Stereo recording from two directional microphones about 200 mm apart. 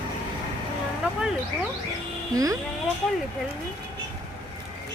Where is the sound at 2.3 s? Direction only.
15° right (ahead or behind).